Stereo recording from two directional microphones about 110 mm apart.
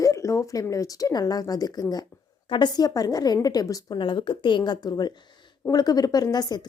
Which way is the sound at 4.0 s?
50° left (ahead or behind).